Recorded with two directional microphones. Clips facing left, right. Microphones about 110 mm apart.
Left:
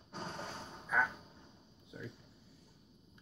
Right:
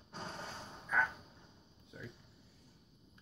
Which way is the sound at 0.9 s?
5° left (ahead or behind).